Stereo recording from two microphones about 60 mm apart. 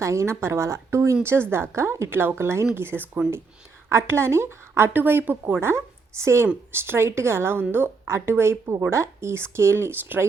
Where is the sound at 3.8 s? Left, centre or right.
Right.